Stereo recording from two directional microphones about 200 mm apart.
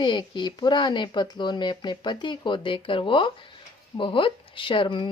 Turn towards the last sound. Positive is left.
turn(degrees=25)  # may be behind; listen again after turning